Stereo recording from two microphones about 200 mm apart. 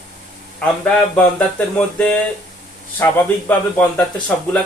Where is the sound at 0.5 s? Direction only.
5° left (ahead or behind).